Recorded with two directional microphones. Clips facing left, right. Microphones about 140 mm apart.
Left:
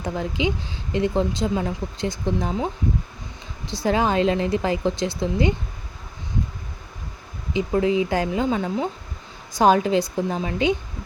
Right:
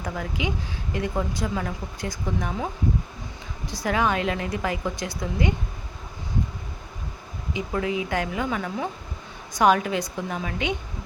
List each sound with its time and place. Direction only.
0.0 s a woman's voice: 25° left (ahead or behind)
3.7 s a woman's voice: 30° left (ahead or behind)
7.5 s a woman's voice: 30° left (ahead or behind)